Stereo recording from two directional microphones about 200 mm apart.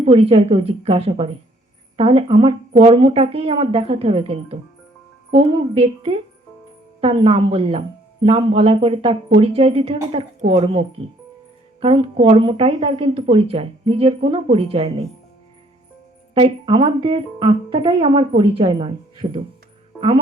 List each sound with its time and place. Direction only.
0.0 s a woman's voice: 30° right (ahead or behind)
16.3 s a woman's voice: 25° right (ahead or behind)